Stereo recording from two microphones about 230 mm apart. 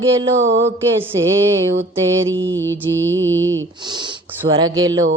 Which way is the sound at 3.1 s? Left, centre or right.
Right.